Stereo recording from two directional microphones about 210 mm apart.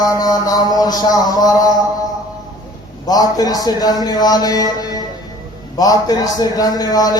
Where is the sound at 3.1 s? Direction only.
15° left (ahead or behind).